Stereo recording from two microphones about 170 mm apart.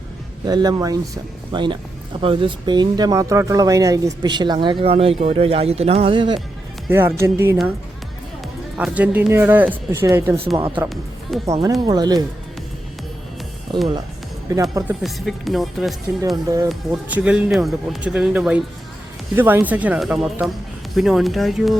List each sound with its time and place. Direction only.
0.4 s speech: 25° right (ahead or behind)
6.9 s speech: 15° right (ahead or behind)
8.8 s speech: 10° right (ahead or behind)
10.8 s speech: centre (ahead or behind)
11.8 s speech: 25° right (ahead or behind)
13.7 s speech: 25° right (ahead or behind)
15.0 s speech: centre (ahead or behind)
16.3 s speech: 20° right (ahead or behind)
16.6 s speech: 5° right (ahead or behind)